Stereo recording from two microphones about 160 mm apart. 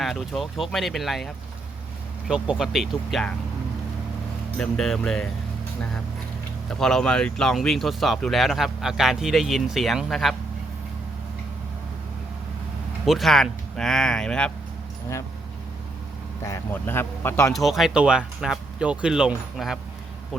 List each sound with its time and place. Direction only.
0.0 s speech: centre (ahead or behind)
4.5 s speech: centre (ahead or behind)
6.7 s speech: 5° left (ahead or behind)
13.1 s speech: centre (ahead or behind)
16.4 s speech: 15° left (ahead or behind)
17.5 s speech: centre (ahead or behind)